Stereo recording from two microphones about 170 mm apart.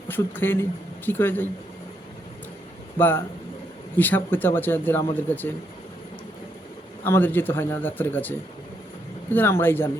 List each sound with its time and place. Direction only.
0.1 s speech: 10° left (ahead or behind)
3.0 s speech: 10° left (ahead or behind)
7.0 s speech: 10° left (ahead or behind)